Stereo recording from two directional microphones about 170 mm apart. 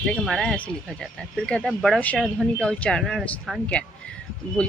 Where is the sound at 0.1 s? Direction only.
Centre (ahead or behind).